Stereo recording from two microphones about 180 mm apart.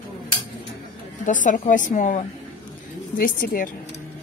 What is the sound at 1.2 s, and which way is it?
Speech, 45° left (ahead or behind).